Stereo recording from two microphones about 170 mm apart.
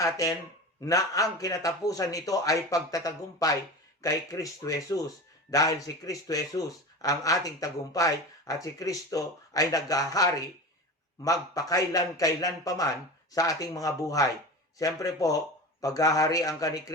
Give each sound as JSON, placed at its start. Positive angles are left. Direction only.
{"t": 0.0, "sound": "speech", "side_deg": 20}